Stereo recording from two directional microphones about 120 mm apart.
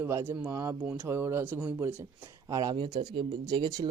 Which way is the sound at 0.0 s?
20° right (ahead or behind).